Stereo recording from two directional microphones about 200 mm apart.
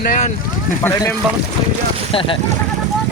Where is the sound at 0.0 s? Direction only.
45° left (ahead or behind).